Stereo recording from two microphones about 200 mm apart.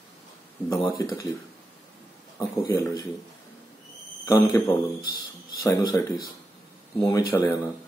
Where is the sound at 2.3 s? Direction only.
15° left (ahead or behind).